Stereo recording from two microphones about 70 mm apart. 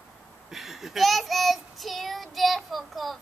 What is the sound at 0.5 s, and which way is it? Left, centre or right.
Child singing, centre.